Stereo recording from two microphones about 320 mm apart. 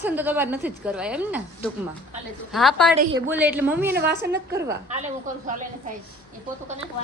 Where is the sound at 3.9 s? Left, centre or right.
Right.